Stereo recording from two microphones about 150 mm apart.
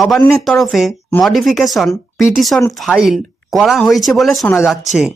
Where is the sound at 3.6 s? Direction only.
Centre (ahead or behind).